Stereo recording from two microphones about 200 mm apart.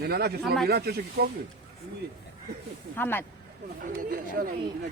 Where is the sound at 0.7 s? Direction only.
50° right (ahead or behind).